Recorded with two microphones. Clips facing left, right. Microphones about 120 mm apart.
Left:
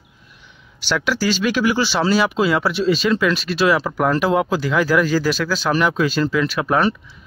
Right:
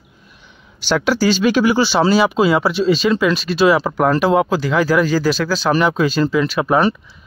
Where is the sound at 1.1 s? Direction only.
25° right (ahead or behind).